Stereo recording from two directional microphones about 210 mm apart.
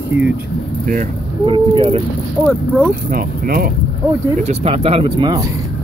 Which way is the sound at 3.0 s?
45° right (ahead or behind).